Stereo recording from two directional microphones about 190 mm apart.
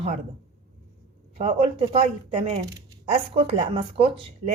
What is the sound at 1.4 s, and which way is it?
A woman's voice, 35° right (ahead or behind).